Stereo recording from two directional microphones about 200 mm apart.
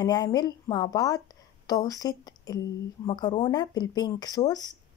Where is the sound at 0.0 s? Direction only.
20° left (ahead or behind).